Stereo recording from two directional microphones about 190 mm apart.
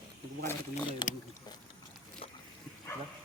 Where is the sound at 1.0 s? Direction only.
20° left (ahead or behind).